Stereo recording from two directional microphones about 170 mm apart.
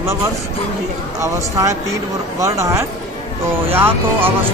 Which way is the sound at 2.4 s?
20° right (ahead or behind).